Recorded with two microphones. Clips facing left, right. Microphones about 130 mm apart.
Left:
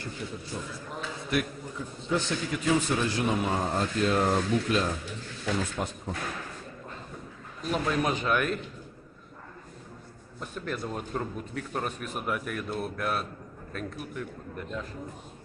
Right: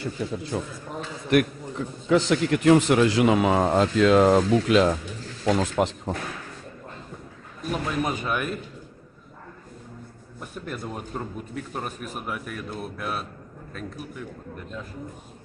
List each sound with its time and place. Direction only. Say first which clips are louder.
0.0 s a man's voice: right 8 dB; 90° right
1.3 s a man's voice: right 9 dB; 65° right (ahead or behind); by 6.1 s 90° right
7.7 s speech: even; 5° right (ahead or behind)
10.5 s speech: even; 10° right (ahead or behind)